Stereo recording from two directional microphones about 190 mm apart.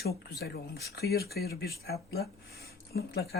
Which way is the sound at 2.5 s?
55° left (ahead or behind).